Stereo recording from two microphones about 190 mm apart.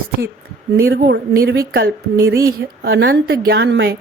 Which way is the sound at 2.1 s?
15° right (ahead or behind).